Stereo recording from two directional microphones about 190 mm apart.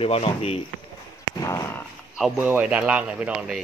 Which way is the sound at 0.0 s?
30° left (ahead or behind).